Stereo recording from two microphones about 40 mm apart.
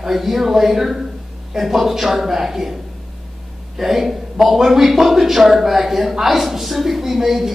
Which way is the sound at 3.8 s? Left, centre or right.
Centre.